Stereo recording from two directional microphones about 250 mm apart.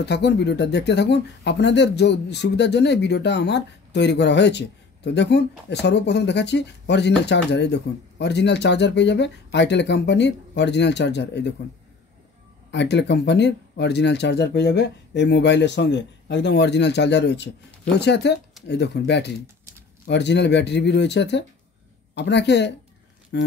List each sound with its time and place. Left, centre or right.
0.0 s speech: left
12.7 s speech: left